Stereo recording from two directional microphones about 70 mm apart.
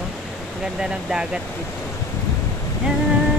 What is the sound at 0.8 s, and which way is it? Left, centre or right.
Speech, centre.